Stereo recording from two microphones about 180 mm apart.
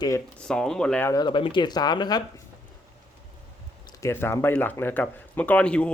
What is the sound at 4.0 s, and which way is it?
Speech, 15° left (ahead or behind).